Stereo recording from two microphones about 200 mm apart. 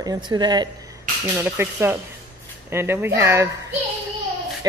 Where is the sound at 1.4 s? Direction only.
10° right (ahead or behind).